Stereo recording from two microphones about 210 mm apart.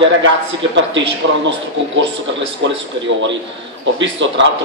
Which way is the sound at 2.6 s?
60° right (ahead or behind).